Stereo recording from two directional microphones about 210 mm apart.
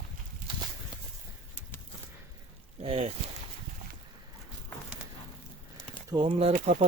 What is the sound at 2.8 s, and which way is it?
Boat, 25° right (ahead or behind).